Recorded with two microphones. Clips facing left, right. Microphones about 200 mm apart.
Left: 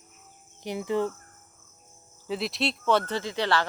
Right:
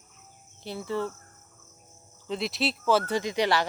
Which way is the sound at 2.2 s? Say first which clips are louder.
Even; centre (ahead or behind).